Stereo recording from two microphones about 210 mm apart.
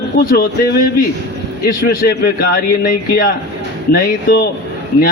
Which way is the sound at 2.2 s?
45° left (ahead or behind).